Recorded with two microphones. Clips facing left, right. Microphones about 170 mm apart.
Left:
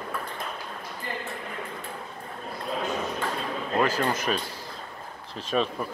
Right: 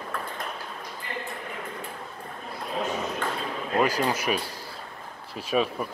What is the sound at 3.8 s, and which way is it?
Speech, 10° right (ahead or behind).